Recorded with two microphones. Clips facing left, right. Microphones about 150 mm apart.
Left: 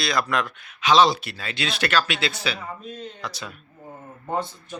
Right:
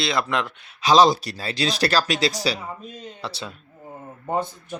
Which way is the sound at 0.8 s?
35° right (ahead or behind).